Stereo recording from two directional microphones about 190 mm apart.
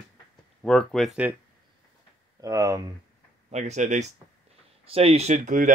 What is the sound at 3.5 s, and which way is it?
Speech, 35° right (ahead or behind).